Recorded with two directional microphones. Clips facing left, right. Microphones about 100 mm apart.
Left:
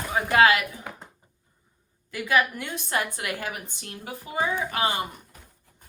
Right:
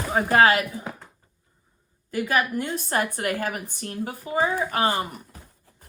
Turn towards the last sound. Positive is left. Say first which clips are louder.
# right 3 dB
turn(degrees=-45)  # may be behind; listen again after turning